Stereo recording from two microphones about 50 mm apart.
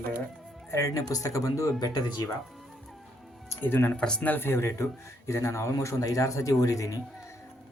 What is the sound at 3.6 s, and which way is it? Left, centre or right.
Speech, left.